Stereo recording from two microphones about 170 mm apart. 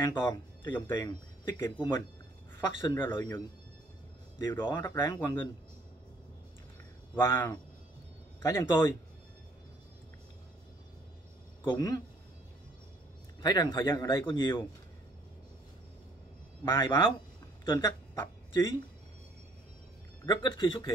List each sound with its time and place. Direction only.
0.0 s speech: 20° left (ahead or behind)
7.2 s speech: 15° left (ahead or behind)
11.6 s speech: 25° left (ahead or behind)
13.4 s speech: 25° left (ahead or behind)
16.7 s speech: 25° left (ahead or behind)
17.7 s speech: 15° left (ahead or behind)
20.2 s speech: 30° left (ahead or behind)